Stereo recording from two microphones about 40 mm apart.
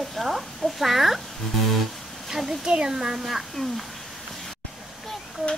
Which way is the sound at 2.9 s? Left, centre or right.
Centre.